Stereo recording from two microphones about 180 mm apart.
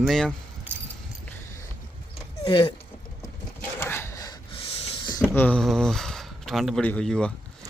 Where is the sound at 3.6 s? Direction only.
15° left (ahead or behind); by 4.9 s 35° left (ahead or behind).